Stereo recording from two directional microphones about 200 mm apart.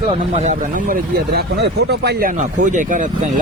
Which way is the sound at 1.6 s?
55° right (ahead or behind).